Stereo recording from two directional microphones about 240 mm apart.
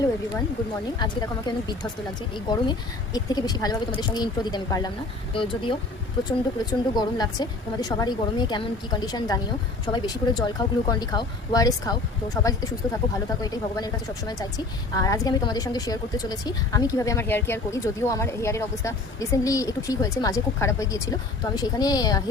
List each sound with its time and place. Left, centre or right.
0.9 s a woman's voice: centre